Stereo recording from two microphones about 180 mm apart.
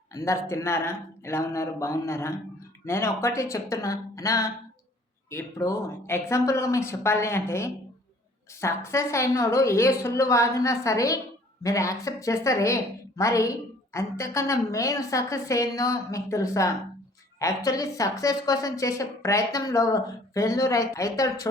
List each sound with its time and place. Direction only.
0.1 s a woman's voice: 15° left (ahead or behind)